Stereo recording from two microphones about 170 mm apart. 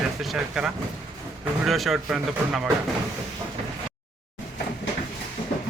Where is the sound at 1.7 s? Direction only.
Centre (ahead or behind).